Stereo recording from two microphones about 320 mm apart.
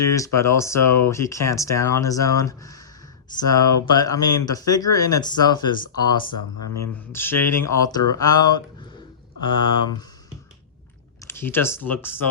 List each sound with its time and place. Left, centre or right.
0.0 s speech: centre
3.6 s speech: left
3.9 s speech: centre
7.1 s speech: centre
8.0 s speech: left
9.4 s speech: left
11.3 s speech: centre